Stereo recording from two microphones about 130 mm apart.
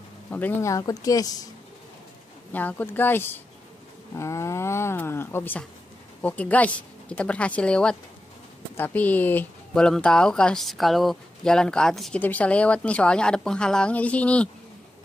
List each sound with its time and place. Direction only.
0.3 s speech: 15° left (ahead or behind); by 1.5 s 30° left (ahead or behind)
2.5 s a woman's voice: 15° left (ahead or behind)